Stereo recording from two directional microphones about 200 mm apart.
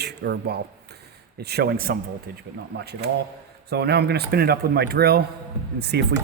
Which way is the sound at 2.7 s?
60° right (ahead or behind).